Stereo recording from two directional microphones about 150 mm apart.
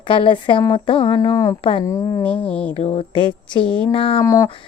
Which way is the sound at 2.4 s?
10° left (ahead or behind).